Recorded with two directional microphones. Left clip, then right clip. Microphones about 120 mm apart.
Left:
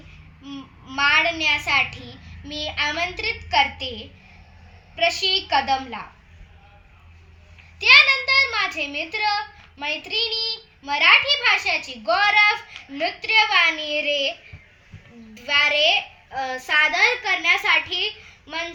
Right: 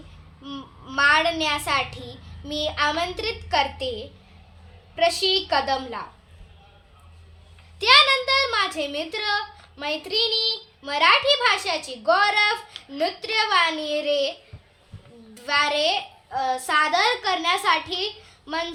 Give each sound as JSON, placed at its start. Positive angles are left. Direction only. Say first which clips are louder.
{"t": 0.4, "sound": "a child's voice", "louder": "right 1 dB", "side_deg": -40}
{"t": 7.8, "sound": "a child's voice", "louder": "left 2 dB", "side_deg": -40}
{"t": 15.4, "sound": "a child's voice", "louder": "left 3 dB", "side_deg": -35}